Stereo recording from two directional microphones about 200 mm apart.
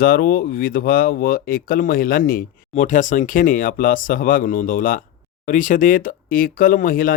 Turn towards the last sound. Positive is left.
turn(degrees=45)  # may be behind; listen again after turning